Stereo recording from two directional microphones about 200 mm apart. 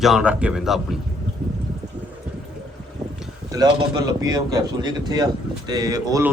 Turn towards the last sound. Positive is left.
turn(degrees=-20)  # may be behind; listen again after turning